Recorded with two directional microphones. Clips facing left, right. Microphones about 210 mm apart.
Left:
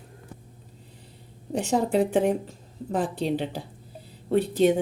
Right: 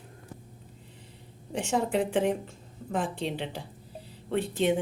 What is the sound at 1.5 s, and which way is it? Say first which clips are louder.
A woman's voice: left 4 dB; 35° left (ahead or behind).